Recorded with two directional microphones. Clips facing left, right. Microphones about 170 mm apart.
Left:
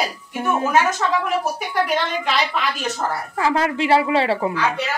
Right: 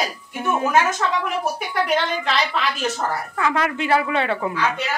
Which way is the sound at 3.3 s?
30° left (ahead or behind).